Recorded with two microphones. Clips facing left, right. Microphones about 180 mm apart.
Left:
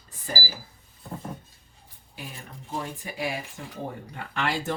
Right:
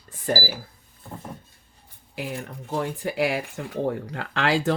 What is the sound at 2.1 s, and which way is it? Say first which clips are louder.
Speech: right 9 dB; 75° right (ahead or behind).